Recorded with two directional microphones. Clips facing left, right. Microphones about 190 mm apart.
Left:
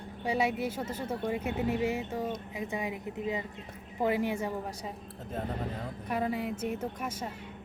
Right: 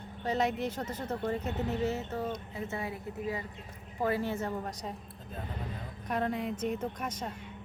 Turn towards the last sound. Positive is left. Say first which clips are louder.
# even
turn(degrees=5)  # may be behind; listen again after turning